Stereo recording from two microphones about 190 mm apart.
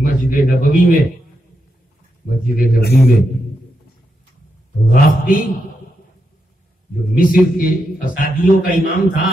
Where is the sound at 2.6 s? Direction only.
55° left (ahead or behind).